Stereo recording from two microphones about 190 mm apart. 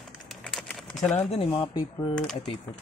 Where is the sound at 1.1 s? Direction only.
30° left (ahead or behind).